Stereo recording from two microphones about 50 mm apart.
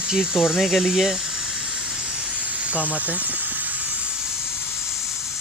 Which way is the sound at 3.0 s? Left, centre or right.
Right.